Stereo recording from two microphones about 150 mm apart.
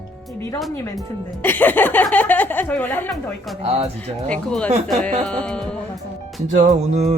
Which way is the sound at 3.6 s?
45° right (ahead or behind).